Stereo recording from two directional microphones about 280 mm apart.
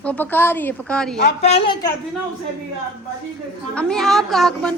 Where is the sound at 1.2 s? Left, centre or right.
Left.